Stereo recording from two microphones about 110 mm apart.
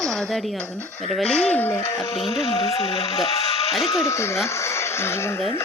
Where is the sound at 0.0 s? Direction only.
5° left (ahead or behind).